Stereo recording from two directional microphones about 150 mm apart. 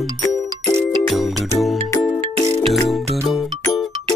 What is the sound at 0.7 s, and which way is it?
Music, 20° right (ahead or behind).